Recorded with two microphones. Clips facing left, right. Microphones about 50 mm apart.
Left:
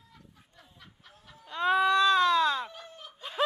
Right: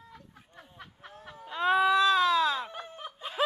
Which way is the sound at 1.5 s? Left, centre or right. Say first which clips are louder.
Even; centre.